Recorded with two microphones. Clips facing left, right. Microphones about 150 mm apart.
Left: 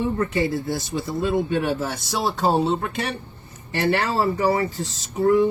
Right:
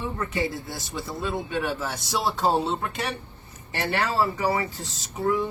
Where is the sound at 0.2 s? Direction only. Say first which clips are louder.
Left 6 dB; 60° left (ahead or behind).